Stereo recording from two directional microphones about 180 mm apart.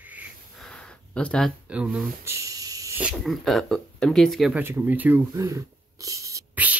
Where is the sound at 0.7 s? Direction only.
5° left (ahead or behind).